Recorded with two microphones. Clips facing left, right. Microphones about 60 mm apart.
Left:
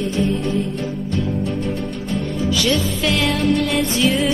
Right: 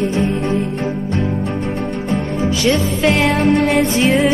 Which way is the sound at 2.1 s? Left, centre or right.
Right.